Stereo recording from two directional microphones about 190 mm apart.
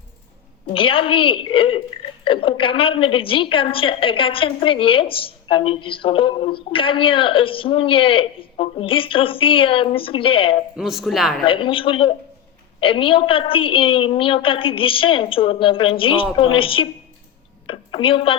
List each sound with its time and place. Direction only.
0.7 s a woman's voice: 30° left (ahead or behind)
10.8 s speech: centre (ahead or behind)
11.4 s a woman's voice: 25° left (ahead or behind)